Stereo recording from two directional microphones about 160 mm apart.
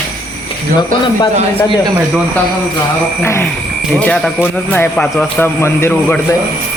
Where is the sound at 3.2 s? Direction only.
15° left (ahead or behind).